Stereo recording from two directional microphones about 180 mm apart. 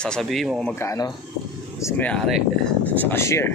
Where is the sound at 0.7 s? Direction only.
15° left (ahead or behind).